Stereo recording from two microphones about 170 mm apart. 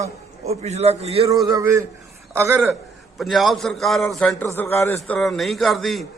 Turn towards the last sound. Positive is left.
turn(degrees=0)  # may be behind; listen again after turning